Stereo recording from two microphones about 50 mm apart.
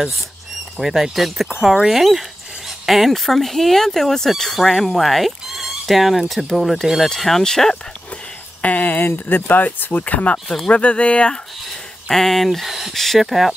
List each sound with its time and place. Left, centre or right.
0.7 s speech: centre
8.6 s speech: left
12.1 s speech: centre